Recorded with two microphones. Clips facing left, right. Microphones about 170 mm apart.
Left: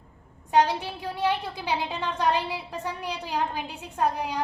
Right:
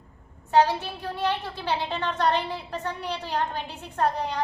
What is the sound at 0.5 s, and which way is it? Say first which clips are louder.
A woman's voice: right 1 dB; 15° left (ahead or behind).